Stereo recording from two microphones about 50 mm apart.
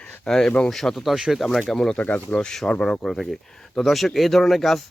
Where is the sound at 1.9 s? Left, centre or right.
Left.